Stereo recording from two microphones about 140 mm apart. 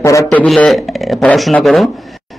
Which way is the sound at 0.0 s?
20° left (ahead or behind).